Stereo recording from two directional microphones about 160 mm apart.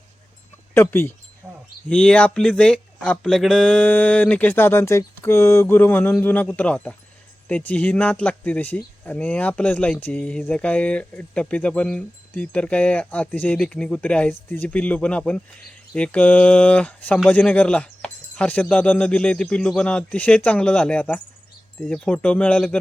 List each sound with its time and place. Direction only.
0.7 s speech: 15° left (ahead or behind)
1.4 s a sound: 15° right (ahead or behind)
1.9 s speech: 5° left (ahead or behind)